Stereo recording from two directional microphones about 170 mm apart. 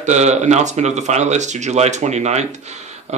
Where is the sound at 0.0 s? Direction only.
40° right (ahead or behind).